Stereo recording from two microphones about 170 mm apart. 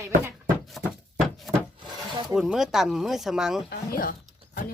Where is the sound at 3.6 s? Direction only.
60° left (ahead or behind).